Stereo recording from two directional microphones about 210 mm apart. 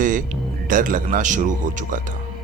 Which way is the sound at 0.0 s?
40° right (ahead or behind).